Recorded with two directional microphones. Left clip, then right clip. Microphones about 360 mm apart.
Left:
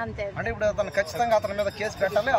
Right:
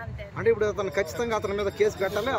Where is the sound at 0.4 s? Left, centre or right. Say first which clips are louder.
Right 3 dB; centre.